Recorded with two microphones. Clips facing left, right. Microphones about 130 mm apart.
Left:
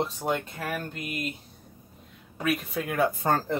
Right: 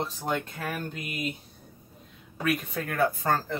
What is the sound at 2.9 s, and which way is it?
Speech, 20° left (ahead or behind).